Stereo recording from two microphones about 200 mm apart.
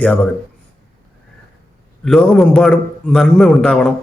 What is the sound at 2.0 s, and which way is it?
A man's voice, centre (ahead or behind).